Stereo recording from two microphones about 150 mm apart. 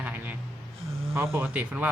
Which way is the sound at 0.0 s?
10° right (ahead or behind).